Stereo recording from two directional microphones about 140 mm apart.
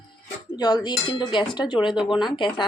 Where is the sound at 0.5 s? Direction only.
30° left (ahead or behind).